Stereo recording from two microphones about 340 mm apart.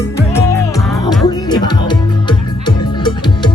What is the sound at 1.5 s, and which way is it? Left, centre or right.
Music, centre.